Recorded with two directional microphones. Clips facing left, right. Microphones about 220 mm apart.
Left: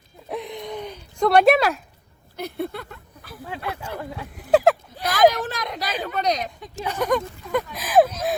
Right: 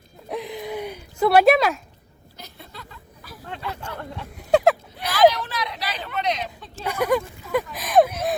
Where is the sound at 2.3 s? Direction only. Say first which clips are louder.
Left 15 dB; 60° left (ahead or behind).